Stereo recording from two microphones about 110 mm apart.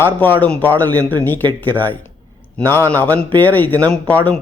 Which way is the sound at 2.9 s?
15° left (ahead or behind).